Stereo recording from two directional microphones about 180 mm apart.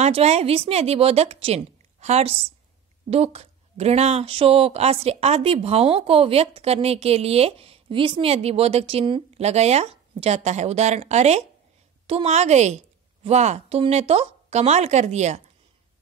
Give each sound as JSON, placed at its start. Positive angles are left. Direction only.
{"t": 0.0, "sound": "a woman's voice", "side_deg": -35}